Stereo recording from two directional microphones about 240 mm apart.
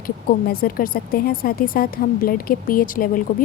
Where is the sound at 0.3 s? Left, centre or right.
Left.